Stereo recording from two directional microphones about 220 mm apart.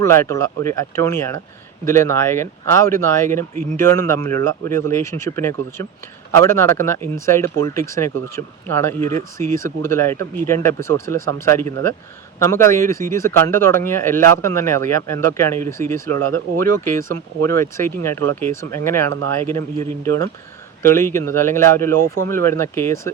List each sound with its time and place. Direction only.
0.0 s speech: 10° left (ahead or behind)
16.1 s speech: 85° right
16.8 s speech: 10° left (ahead or behind)